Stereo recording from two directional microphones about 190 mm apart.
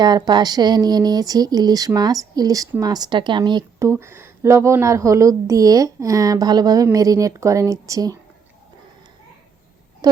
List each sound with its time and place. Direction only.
0.0 s speech: 20° right (ahead or behind)
10.0 s speech: 20° right (ahead or behind)